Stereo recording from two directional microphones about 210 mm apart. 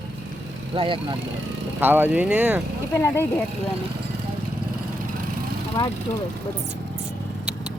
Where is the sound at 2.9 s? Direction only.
10° left (ahead or behind).